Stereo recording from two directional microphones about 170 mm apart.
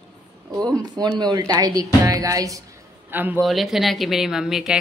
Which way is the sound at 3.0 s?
10° right (ahead or behind).